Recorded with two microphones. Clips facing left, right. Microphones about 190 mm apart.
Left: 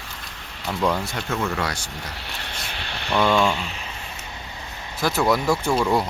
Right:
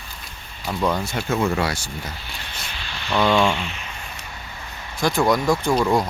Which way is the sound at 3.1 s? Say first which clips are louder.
Right 1 dB; 5° left (ahead or behind).